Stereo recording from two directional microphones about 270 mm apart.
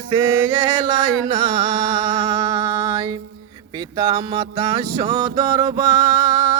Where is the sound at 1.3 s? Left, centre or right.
Centre.